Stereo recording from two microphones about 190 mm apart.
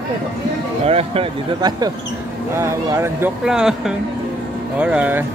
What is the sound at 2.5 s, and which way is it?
Speech, 15° right (ahead or behind).